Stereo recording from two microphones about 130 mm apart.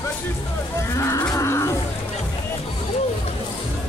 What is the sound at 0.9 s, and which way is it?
Cattle, 25° left (ahead or behind).